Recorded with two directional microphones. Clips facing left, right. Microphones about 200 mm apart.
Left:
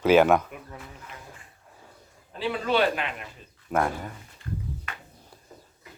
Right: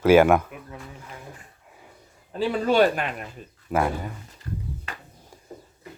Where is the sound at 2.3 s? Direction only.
45° right (ahead or behind).